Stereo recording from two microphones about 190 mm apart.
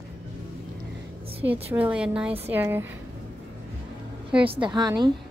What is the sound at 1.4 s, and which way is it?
A woman's voice, 10° right (ahead or behind).